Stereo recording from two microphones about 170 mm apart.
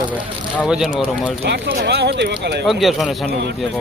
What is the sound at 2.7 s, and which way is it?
Speech, centre (ahead or behind).